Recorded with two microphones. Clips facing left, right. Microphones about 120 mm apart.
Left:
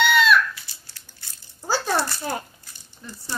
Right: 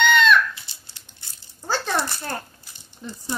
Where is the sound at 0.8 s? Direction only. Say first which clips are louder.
Even; 20° right (ahead or behind).